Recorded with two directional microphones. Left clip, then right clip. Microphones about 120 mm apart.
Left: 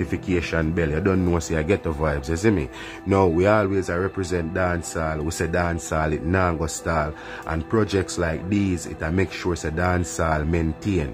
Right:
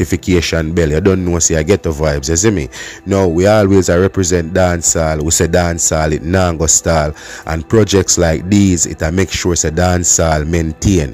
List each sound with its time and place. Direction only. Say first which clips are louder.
0.0 s speech: right 10 dB; 50° right (ahead or behind)
3.4 s speech: right 10 dB; 65° right (ahead or behind)